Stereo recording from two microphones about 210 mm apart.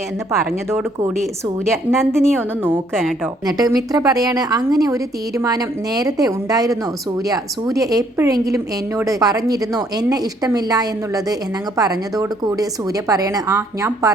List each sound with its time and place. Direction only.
1.6 s a woman's voice: centre (ahead or behind)
3.4 s a woman's voice: 20° right (ahead or behind)